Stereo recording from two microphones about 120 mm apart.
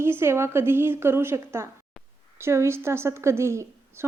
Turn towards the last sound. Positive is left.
turn(degrees=-25)  # may be behind; listen again after turning